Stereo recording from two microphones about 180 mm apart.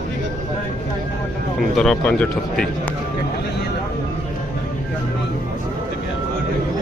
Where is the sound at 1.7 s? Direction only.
5° left (ahead or behind).